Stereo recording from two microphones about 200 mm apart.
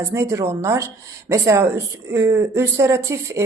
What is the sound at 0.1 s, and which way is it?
Speech, 15° right (ahead or behind).